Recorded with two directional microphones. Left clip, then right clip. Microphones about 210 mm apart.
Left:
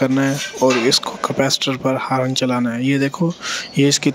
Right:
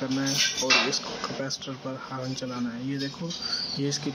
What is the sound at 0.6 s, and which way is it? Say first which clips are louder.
Speech: left 12 dB; 45° left (ahead or behind).